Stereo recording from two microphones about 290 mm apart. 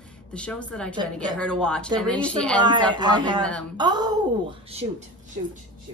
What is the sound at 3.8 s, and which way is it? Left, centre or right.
Speech, centre.